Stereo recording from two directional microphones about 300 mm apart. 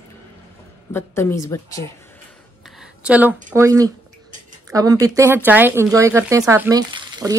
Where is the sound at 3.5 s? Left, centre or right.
Centre.